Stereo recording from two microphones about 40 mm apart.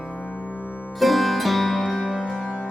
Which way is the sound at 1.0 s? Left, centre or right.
Centre.